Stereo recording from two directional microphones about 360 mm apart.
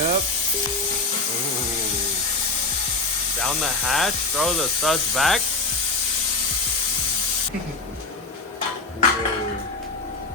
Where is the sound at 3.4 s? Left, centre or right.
Centre.